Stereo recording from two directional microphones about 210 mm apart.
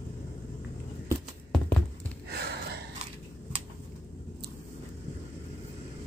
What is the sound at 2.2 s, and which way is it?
Gasp, 50° right (ahead or behind).